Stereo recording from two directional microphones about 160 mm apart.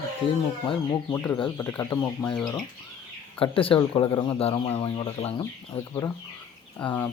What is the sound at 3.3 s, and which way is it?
Speech, 35° left (ahead or behind).